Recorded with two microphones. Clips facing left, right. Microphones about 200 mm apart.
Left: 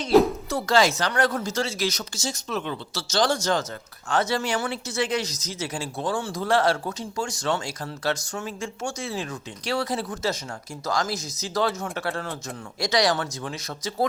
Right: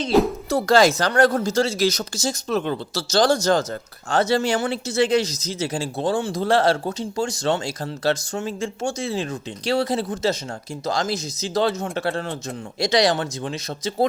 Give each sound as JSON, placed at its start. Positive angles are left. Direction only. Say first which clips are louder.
{"t": 0.4, "sound": "speech", "louder": "right 5 dB", "side_deg": -35}